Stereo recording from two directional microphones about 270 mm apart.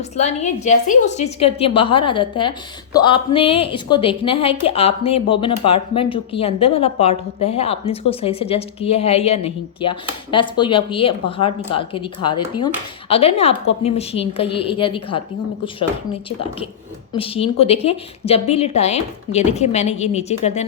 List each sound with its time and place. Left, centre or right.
0.2 s a woman's voice: left
17.2 s a woman's voice: left